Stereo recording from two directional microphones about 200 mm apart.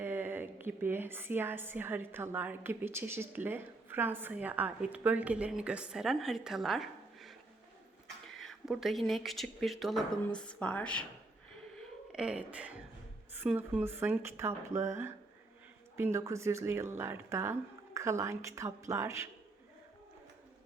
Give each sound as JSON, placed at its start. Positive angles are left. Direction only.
{"t": 0.0, "sound": "a woman's voice", "side_deg": -10}
{"t": 8.4, "sound": "speech", "side_deg": 0}
{"t": 12.1, "sound": "a woman's voice", "side_deg": -5}